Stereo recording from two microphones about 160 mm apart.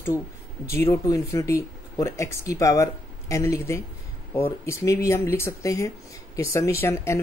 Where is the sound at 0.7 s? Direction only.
15° left (ahead or behind).